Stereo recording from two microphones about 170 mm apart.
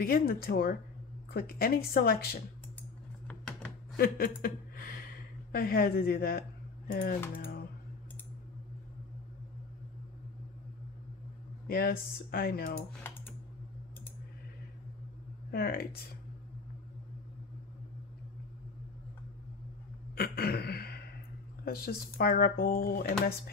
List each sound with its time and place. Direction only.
0.0 s speech: 60° left (ahead or behind)
3.9 s a sound: 60° left (ahead or behind)
5.5 s speech: 60° left (ahead or behind)
6.9 s typing: 65° left (ahead or behind)
11.6 s speech: 60° left (ahead or behind)
15.5 s speech: 65° left (ahead or behind)
20.2 s a sound: 65° left (ahead or behind)
21.6 s speech: 65° left (ahead or behind)